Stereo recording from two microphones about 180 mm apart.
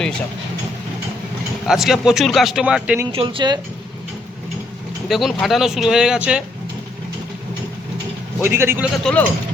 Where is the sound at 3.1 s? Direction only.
30° right (ahead or behind).